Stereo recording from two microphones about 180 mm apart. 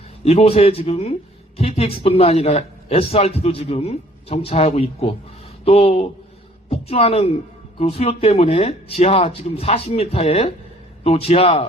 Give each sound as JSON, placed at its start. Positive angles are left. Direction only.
{"t": 0.3, "sound": "a man's voice", "side_deg": 35}